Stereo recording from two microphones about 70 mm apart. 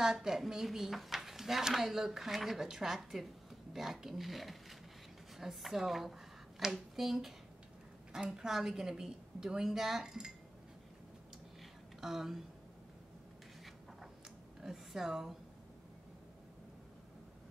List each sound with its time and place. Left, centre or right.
0.0 s a woman's voice: centre
12.0 s speech: centre
14.6 s a woman's voice: centre